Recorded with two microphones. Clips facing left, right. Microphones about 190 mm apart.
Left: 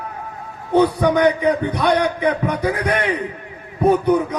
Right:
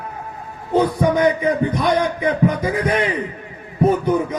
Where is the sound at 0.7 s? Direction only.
70° left (ahead or behind).